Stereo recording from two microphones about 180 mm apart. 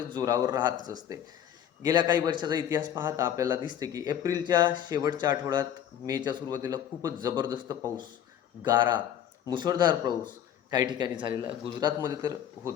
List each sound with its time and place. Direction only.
0.1 s a man's voice: 20° right (ahead or behind)